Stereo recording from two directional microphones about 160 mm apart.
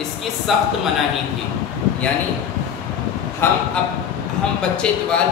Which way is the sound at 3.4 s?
15° left (ahead or behind).